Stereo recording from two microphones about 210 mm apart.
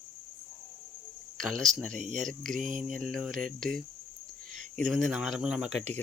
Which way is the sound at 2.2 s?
Centre (ahead or behind).